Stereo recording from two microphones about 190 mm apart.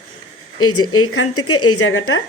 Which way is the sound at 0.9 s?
90° left.